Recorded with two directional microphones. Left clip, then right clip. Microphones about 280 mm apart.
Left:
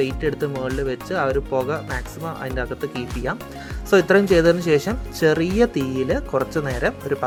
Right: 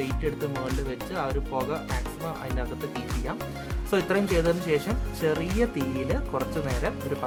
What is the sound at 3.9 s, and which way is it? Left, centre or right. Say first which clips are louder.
Speech: left 10 dB; centre.